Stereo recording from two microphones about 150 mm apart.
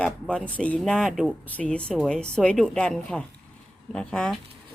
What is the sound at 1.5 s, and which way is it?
Speech, 10° left (ahead or behind).